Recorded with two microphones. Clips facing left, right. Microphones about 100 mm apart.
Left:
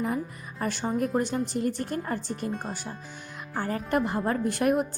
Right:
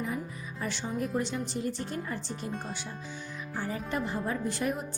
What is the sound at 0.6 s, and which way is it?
A woman's voice, 50° left (ahead or behind).